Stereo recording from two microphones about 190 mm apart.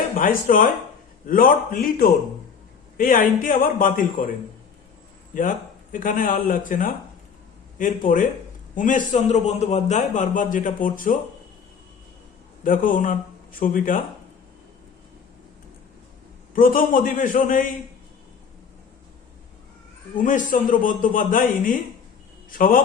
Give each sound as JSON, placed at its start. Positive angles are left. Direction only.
{"t": 0.2, "sound": "a man's voice", "side_deg": 45}
{"t": 5.3, "sound": "a man's voice", "side_deg": 45}
{"t": 12.6, "sound": "a man's voice", "side_deg": 45}
{"t": 16.6, "sound": "a man's voice", "side_deg": 45}
{"t": 20.2, "sound": "a man's voice", "side_deg": 45}